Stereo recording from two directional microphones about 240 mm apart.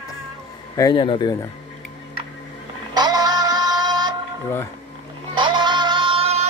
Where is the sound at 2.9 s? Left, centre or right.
Centre.